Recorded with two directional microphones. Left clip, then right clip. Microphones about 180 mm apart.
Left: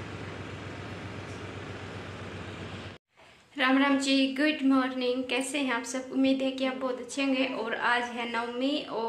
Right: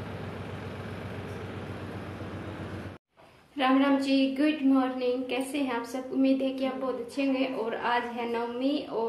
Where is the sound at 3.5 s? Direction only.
Centre (ahead or behind).